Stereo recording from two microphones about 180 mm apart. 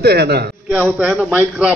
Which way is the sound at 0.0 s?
65° right (ahead or behind).